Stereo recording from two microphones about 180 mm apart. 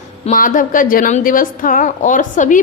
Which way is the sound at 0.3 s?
50° left (ahead or behind).